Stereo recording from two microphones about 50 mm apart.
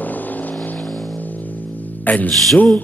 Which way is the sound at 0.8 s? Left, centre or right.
Centre.